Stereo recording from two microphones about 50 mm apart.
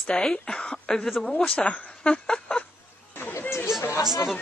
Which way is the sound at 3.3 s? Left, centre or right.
Left.